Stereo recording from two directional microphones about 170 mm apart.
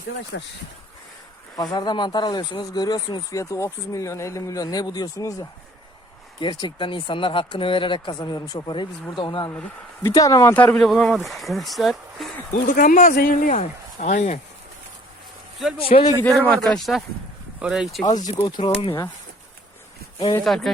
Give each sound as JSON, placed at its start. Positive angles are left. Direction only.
{"t": 0.3, "sound": "speech", "side_deg": 90}
{"t": 1.5, "sound": "speech", "side_deg": 25}
{"t": 12.5, "sound": "speech", "side_deg": 55}
{"t": 13.6, "sound": "speech", "side_deg": 40}
{"t": 15.9, "sound": "speech", "side_deg": 45}
{"t": 16.2, "sound": "speech", "side_deg": 10}
{"t": 18.3, "sound": "speech", "side_deg": 20}
{"t": 18.6, "sound": "speech", "side_deg": 35}
{"t": 20.4, "sound": "speech", "side_deg": 0}